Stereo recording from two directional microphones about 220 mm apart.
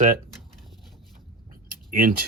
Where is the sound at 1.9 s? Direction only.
40° right (ahead or behind).